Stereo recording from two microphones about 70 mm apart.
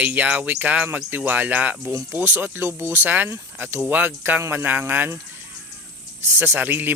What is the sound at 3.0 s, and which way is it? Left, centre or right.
Speech, right.